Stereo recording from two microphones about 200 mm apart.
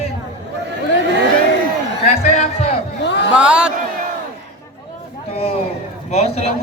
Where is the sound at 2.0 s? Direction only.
35° left (ahead or behind).